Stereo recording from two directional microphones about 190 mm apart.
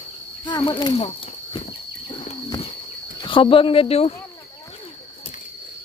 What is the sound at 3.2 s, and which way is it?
Speech, 25° left (ahead or behind).